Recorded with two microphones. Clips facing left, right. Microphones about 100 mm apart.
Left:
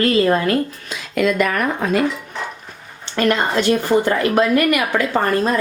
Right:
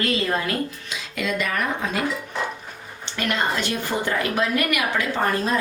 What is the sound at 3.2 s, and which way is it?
A woman's voice, 40° left (ahead or behind).